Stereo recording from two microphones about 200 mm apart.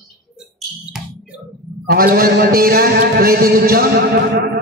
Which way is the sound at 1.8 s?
50° right (ahead or behind).